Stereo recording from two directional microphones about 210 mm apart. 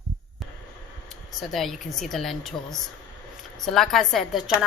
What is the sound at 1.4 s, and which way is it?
A woman's voice, centre (ahead or behind).